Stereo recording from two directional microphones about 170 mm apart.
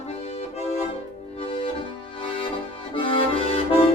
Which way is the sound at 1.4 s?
30° left (ahead or behind).